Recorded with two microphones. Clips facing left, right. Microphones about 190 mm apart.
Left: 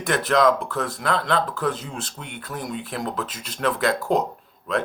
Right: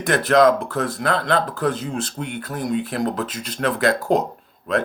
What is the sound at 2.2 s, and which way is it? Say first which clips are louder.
Speech: right 6 dB; 40° right (ahead or behind).